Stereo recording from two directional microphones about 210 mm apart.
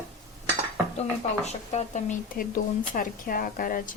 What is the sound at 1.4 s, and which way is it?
Speech, 30° left (ahead or behind).